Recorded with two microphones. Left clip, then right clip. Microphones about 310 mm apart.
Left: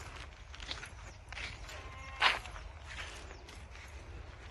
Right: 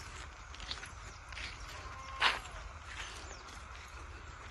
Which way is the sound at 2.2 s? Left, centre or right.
Centre.